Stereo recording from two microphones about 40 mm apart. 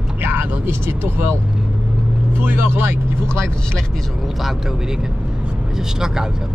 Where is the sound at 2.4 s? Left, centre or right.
Right.